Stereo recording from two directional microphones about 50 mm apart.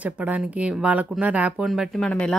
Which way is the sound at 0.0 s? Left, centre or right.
Right.